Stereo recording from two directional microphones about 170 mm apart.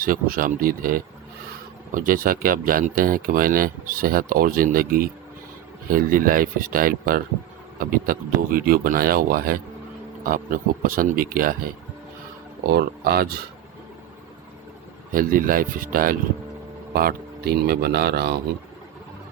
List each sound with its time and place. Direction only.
0.0 s speech: 55° right (ahead or behind)
12.7 s speech: 65° right (ahead or behind)
15.1 s speech: 55° right (ahead or behind); by 18.3 s 70° right (ahead or behind)